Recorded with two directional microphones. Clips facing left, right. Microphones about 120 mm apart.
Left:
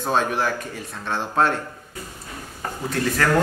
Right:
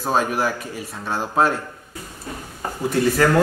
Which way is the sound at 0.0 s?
5° right (ahead or behind).